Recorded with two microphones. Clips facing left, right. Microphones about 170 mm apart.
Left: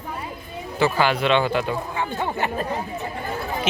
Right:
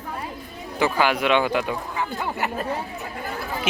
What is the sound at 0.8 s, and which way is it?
Speech, 15° right (ahead or behind).